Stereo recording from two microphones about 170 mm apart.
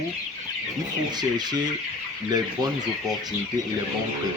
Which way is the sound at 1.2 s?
25° right (ahead or behind).